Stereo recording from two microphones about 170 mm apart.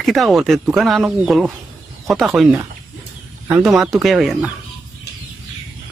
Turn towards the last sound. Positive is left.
turn(degrees=-5)  # may be behind; listen again after turning